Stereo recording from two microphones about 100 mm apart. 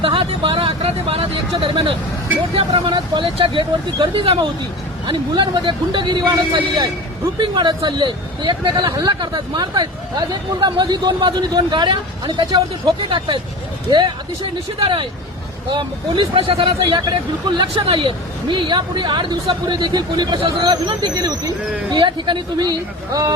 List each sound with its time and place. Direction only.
0.0 s a sound: 65° right (ahead or behind)
1.5 s speech: 55° right (ahead or behind)
5.0 s speech: 50° right (ahead or behind)
14.8 s speech: 60° right (ahead or behind); by 23.3 s 40° right (ahead or behind)